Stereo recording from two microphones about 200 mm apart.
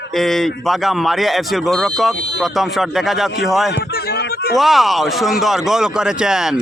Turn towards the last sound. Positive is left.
turn(degrees=-5)  # may be behind; listen again after turning